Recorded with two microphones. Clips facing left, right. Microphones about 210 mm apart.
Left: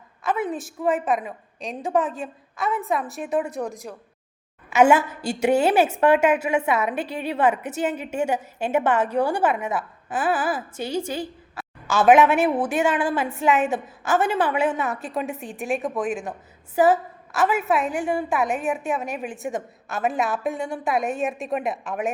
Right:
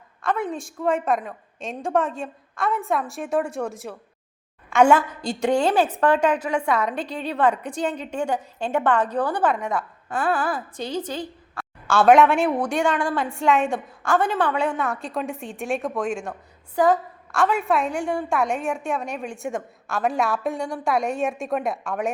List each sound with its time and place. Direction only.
0.2 s a woman's voice: 5° left (ahead or behind)
3.5 s a woman's voice: 15° left (ahead or behind)